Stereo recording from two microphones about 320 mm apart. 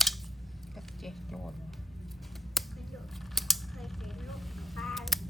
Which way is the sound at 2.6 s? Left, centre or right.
Centre.